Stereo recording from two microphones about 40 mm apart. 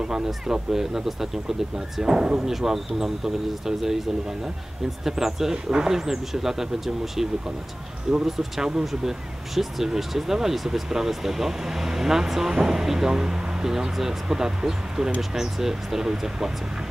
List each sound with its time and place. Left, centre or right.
0.0 s speech: centre
5.0 s speech: centre
8.4 s speech: centre